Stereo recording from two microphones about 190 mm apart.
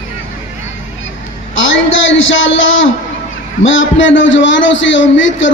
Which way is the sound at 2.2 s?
90° left.